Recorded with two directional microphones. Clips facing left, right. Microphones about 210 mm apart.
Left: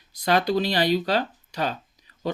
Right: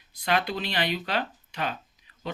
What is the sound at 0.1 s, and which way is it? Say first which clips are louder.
Speech: left 6 dB; 40° left (ahead or behind).